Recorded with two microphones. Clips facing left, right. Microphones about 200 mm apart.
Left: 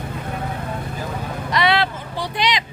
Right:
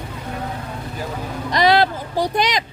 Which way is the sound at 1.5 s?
40° right (ahead or behind).